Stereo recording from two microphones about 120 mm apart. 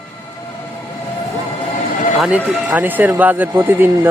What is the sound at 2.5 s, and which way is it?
Speech, 10° right (ahead or behind).